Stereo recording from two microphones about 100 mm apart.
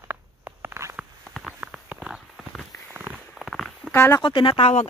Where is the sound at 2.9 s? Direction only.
20° right (ahead or behind).